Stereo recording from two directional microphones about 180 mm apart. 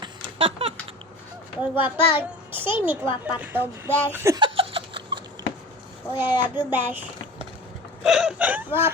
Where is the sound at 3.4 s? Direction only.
10° right (ahead or behind); by 5.2 s 30° right (ahead or behind).